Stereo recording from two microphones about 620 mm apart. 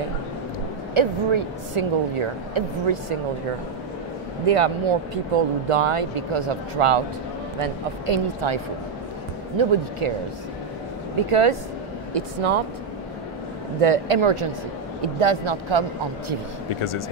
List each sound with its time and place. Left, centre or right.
0.9 s speech: right
4.5 s speech: right
9.6 s speech: right
11.1 s speech: right
13.7 s speech: right
16.6 s speech: left